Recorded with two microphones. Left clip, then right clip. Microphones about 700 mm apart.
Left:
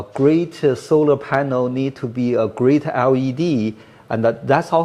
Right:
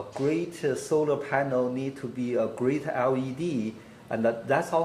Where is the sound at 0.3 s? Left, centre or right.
Left.